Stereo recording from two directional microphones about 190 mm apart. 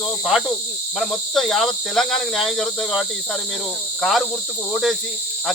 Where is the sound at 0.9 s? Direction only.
Centre (ahead or behind).